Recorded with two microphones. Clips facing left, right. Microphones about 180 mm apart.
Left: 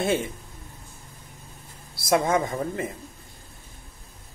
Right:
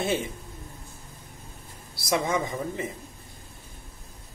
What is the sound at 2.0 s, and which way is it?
Speech, 50° left (ahead or behind).